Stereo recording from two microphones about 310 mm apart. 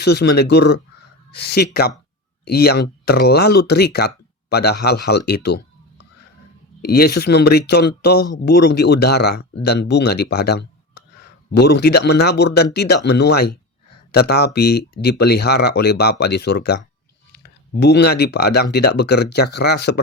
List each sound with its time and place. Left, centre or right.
0.0 s speech: left
6.8 s speech: left